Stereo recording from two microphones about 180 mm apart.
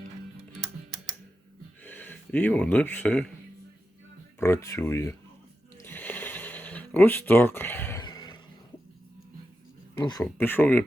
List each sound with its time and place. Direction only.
1.8 s speech: 10° left (ahead or behind)
4.4 s speech: 15° left (ahead or behind)
5.8 s a sound: 10° left (ahead or behind)
8.0 s neigh: 25° left (ahead or behind)
10.0 s speech: 20° left (ahead or behind)
10.2 s speech: 10° left (ahead or behind)